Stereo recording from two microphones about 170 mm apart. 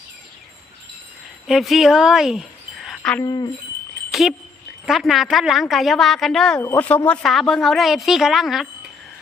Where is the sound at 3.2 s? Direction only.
25° left (ahead or behind).